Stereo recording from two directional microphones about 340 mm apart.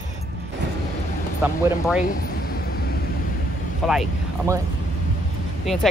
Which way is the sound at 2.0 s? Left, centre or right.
Left.